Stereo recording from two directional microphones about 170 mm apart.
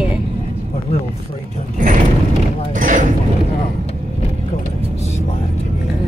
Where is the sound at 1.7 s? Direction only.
50° right (ahead or behind).